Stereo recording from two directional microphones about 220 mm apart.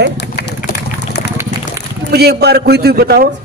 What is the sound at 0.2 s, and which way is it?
Run, 50° left (ahead or behind).